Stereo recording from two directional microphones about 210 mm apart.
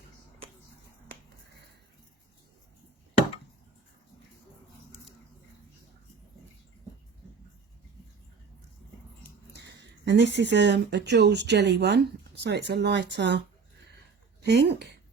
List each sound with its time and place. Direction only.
9.5 s speech: 55° right (ahead or behind)
14.4 s speech: 55° right (ahead or behind)